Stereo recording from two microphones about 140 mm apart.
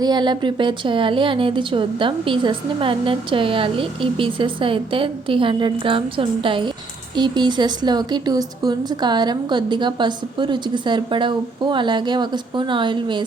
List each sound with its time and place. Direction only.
0.0 s speech: 30° right (ahead or behind)